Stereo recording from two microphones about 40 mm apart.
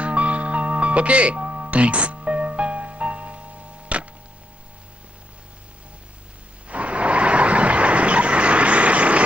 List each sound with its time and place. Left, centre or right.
0.0 s music: right
6.7 s vehicle: right